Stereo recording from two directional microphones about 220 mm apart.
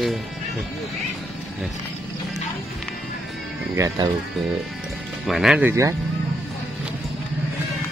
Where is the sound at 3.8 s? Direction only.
15° right (ahead or behind).